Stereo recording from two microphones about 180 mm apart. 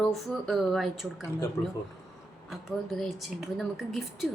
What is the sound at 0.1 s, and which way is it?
Speech, centre (ahead or behind).